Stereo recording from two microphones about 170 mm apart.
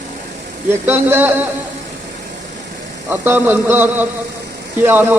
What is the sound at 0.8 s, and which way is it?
Speech, 10° right (ahead or behind).